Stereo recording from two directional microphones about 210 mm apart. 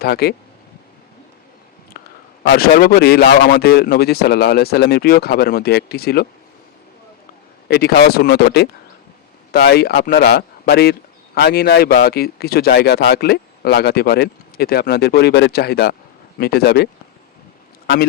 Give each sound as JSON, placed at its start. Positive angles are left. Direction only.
{"t": 0.0, "sound": "speech", "side_deg": 50}
{"t": 2.0, "sound": "a sound", "side_deg": 50}
{"t": 2.5, "sound": "speech", "side_deg": 45}
{"t": 7.7, "sound": "speech", "side_deg": 50}